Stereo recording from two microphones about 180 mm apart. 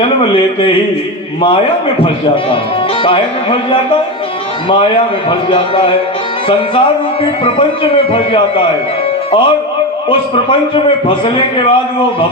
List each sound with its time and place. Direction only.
3.0 s a man's voice: 30° left (ahead or behind)
10.8 s a man's voice: 30° left (ahead or behind)